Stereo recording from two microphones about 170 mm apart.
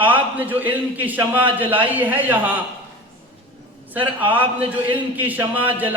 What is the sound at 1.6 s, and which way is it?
Speech, 30° right (ahead or behind).